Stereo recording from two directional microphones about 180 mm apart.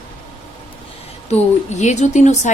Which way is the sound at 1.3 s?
40° left (ahead or behind).